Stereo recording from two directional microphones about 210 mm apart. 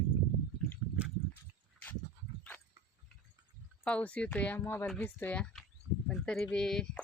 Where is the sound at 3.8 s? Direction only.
5° left (ahead or behind).